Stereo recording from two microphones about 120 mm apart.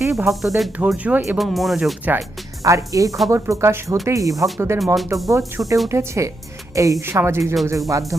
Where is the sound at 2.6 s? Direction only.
25° right (ahead or behind).